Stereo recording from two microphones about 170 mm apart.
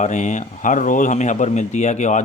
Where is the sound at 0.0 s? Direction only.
45° left (ahead or behind).